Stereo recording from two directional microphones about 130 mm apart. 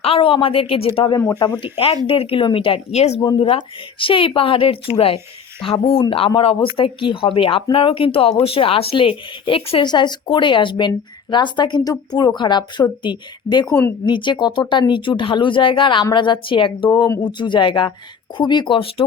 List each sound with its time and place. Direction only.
0.0 s speech: 45° left (ahead or behind)
1.2 s speech: 25° left (ahead or behind)
1.7 s speech: 45° left (ahead or behind)
3.2 s speech: 35° left (ahead or behind)
16.9 s speech: 30° left (ahead or behind)